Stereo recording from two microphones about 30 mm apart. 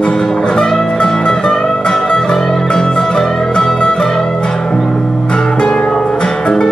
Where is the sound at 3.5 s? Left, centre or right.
Left.